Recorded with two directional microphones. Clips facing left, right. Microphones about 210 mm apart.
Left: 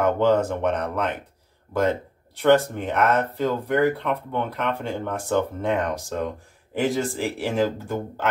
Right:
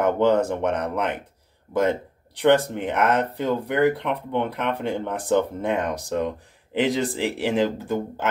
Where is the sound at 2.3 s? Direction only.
15° right (ahead or behind).